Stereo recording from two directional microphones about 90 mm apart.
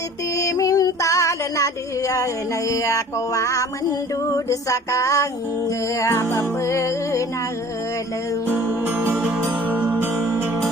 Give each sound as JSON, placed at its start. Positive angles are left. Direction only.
{"t": 0.3, "sound": "music", "side_deg": 35}
{"t": 8.4, "sound": "music", "side_deg": -25}